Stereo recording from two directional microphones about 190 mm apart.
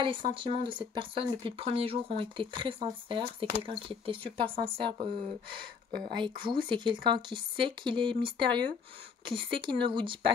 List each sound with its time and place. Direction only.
0.0 s speech: 25° right (ahead or behind)